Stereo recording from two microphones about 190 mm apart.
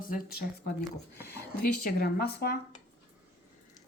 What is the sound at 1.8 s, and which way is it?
Speech, 55° left (ahead or behind).